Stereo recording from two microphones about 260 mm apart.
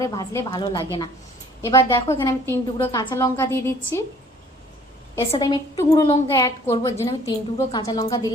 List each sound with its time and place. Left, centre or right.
0.0 s a woman's voice: centre
5.3 s a woman's voice: centre